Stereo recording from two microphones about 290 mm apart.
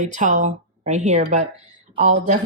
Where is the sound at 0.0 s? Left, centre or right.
Right.